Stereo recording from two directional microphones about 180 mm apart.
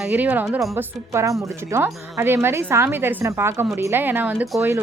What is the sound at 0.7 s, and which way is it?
Speech, 15° right (ahead or behind).